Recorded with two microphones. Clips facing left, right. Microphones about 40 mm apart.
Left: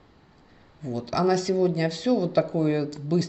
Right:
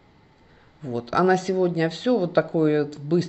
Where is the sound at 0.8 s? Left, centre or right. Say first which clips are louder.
Right 3 dB; right.